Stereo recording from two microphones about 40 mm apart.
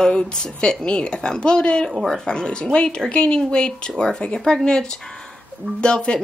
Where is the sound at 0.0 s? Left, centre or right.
Centre.